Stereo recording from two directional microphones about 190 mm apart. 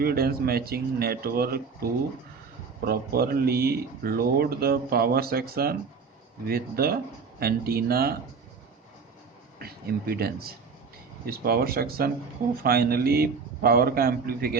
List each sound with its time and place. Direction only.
0.0 s speech: 55° right (ahead or behind)
2.8 s speech: 50° right (ahead or behind)
9.6 s speech: 55° right (ahead or behind)